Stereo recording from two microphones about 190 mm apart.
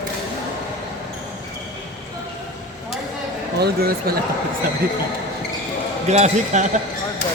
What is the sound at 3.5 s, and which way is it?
Speech, 55° right (ahead or behind).